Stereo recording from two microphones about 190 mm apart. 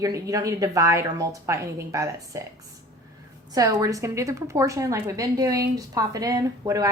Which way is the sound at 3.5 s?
20° right (ahead or behind).